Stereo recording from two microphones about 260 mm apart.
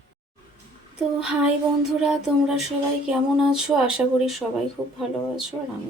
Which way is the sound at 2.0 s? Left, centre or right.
Centre.